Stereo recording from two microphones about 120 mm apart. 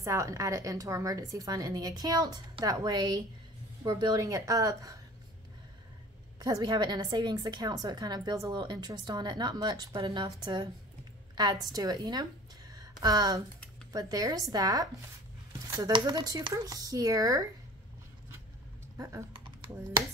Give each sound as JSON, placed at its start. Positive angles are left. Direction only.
{"t": 0.0, "sound": "a woman's voice", "side_deg": -25}
{"t": 6.4, "sound": "a woman's voice", "side_deg": -30}
{"t": 12.7, "sound": "a sound", "side_deg": -35}
{"t": 13.9, "sound": "a woman's voice", "side_deg": -30}
{"t": 18.9, "sound": "a woman's voice", "side_deg": -25}